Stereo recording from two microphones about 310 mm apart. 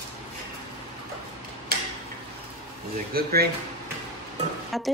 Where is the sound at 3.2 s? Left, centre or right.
Right.